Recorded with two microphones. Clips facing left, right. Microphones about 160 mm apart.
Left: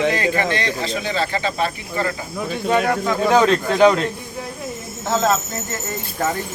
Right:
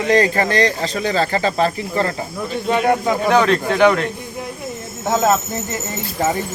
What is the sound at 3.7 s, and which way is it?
Speech, 20° left (ahead or behind).